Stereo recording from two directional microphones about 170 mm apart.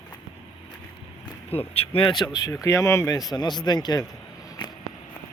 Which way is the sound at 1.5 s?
35° left (ahead or behind).